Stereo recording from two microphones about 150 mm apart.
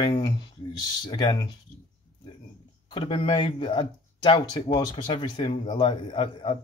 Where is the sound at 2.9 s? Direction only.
35° left (ahead or behind).